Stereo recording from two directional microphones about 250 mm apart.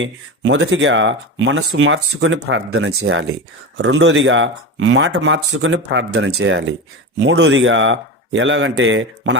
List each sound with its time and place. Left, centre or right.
0.0 s speech: right